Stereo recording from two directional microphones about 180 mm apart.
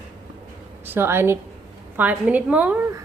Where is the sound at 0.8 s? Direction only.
10° right (ahead or behind).